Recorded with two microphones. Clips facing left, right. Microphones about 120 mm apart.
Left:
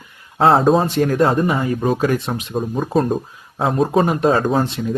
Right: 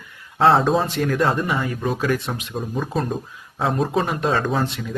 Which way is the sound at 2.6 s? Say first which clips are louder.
Left 6 dB; 40° left (ahead or behind).